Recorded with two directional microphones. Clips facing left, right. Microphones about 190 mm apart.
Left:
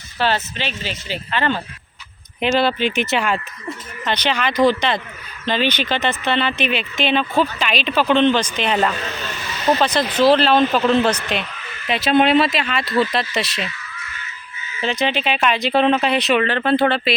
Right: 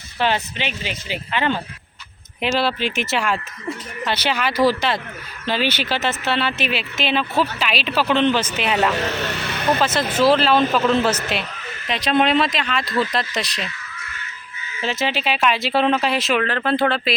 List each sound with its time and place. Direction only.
0.2 s speech: 15° right (ahead or behind)
2.4 s speech: centre (ahead or behind)
8.9 s vehicle: 70° right (ahead or behind)
9.8 s speech: 5° right (ahead or behind)
14.8 s speech: 5° right (ahead or behind)